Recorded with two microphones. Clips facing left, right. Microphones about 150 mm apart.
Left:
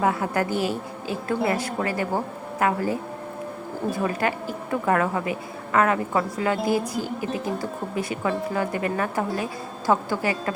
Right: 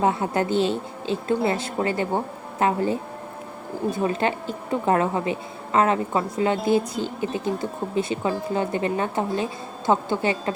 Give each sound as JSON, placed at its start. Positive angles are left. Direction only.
{"t": 0.0, "sound": "speech", "side_deg": -25}